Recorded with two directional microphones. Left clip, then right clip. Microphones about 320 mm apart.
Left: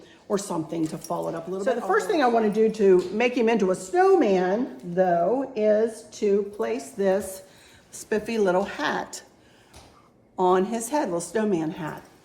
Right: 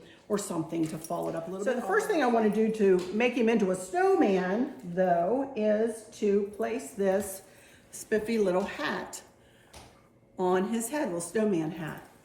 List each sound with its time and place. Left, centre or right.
0.3 s speech: left
10.3 s speech: left